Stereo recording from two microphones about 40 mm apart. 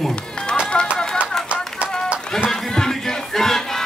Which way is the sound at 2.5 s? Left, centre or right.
Centre.